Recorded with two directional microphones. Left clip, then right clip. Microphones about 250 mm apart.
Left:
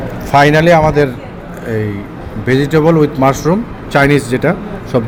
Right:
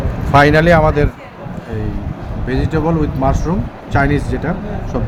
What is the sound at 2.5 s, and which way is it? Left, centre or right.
A man's voice, centre.